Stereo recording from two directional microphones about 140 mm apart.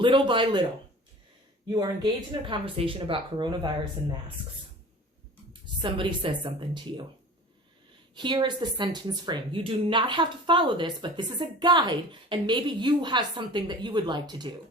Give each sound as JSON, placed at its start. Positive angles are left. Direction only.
{"t": 0.0, "sound": "speech", "side_deg": -35}
{"t": 1.7, "sound": "speech", "side_deg": -30}
{"t": 5.8, "sound": "speech", "side_deg": -35}
{"t": 8.1, "sound": "speech", "side_deg": -35}